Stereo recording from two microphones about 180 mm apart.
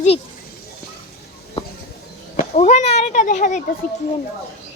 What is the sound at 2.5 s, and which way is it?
Speech, 40° left (ahead or behind).